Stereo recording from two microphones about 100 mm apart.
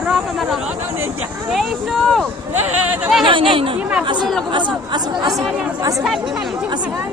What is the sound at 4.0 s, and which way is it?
Speech, 50° right (ahead or behind).